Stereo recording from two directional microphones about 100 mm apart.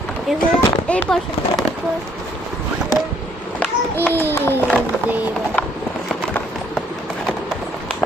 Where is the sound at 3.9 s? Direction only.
20° left (ahead or behind).